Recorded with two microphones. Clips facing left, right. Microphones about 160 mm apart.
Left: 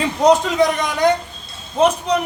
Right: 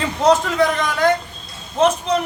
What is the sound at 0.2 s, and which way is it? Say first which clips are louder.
A man's voice: left 1 dB; 15° left (ahead or behind).